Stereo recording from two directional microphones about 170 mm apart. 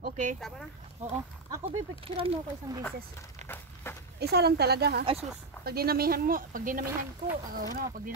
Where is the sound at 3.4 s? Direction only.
45° right (ahead or behind).